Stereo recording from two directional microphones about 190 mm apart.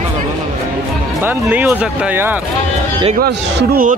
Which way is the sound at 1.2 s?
10° right (ahead or behind).